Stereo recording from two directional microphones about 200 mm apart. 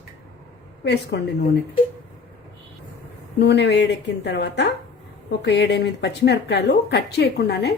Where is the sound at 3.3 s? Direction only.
55° left (ahead or behind).